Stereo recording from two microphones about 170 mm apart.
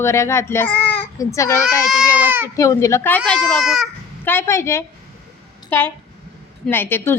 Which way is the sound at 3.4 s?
Centre (ahead or behind).